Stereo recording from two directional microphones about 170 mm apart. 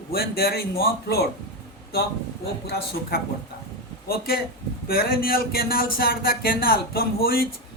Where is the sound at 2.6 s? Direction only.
65° left (ahead or behind).